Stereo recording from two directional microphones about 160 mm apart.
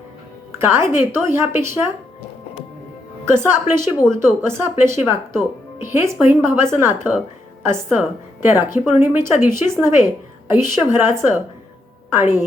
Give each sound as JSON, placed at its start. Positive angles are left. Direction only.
{"t": 0.6, "sound": "speech", "side_deg": -15}
{"t": 3.2, "sound": "speech", "side_deg": -15}
{"t": 3.8, "sound": "speech", "side_deg": 5}
{"t": 4.2, "sound": "speech", "side_deg": -15}